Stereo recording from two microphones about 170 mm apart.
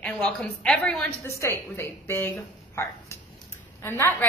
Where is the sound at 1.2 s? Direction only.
15° left (ahead or behind).